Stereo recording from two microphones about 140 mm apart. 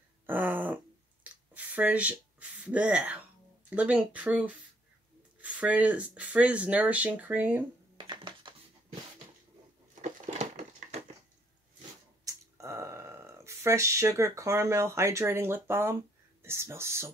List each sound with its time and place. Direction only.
0.3 s a sound: 15° right (ahead or behind)
3.7 s speech: 10° right (ahead or behind)
8.0 s music: 35° right (ahead or behind)
10.2 s crushing: 55° right (ahead or behind)
12.5 s speech: 20° right (ahead or behind)